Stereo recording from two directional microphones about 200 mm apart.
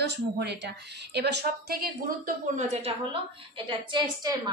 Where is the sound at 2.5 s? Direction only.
30° right (ahead or behind).